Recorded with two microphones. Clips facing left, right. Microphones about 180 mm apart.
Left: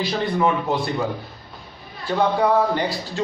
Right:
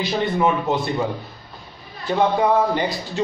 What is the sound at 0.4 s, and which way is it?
Speech, 20° right (ahead or behind).